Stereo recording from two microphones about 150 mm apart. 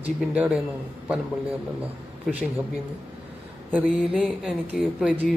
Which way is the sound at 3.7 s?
5° right (ahead or behind).